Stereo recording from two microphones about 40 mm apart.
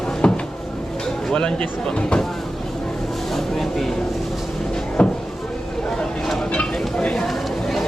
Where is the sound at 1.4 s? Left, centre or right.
Left.